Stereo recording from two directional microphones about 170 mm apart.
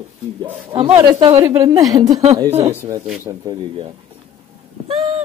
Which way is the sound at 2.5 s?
35° right (ahead or behind).